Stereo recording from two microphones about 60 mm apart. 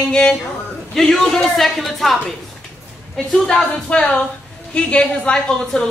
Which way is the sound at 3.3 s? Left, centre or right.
Centre.